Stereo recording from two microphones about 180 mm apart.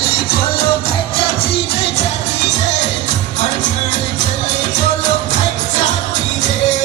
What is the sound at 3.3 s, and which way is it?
Music, 40° left (ahead or behind).